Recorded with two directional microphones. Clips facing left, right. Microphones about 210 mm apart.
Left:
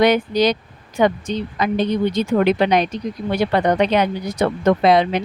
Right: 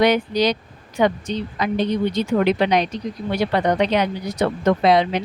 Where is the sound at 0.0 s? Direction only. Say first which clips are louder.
Left 2 dB; 50° left (ahead or behind).